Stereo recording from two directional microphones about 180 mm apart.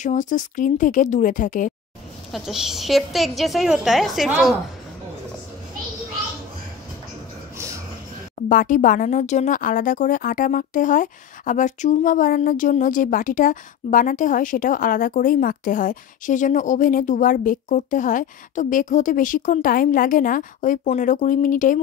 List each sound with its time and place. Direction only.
0.0 s speech: 45° left (ahead or behind)
2.3 s a woman's voice: centre (ahead or behind)
8.4 s speech: 45° left (ahead or behind)